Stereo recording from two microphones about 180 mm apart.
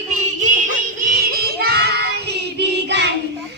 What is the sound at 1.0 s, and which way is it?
Child singing, 55° right (ahead or behind).